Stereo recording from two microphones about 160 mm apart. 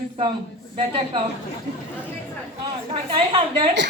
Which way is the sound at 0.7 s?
35° right (ahead or behind).